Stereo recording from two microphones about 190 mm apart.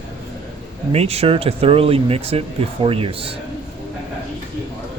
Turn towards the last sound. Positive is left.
turn(degrees=-30)  # may be behind; listen again after turning